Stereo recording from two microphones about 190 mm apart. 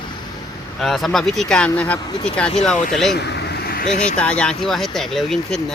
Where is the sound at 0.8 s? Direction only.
Centre (ahead or behind).